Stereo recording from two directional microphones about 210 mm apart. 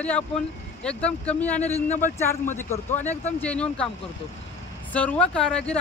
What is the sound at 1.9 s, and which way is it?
Speech, 35° left (ahead or behind).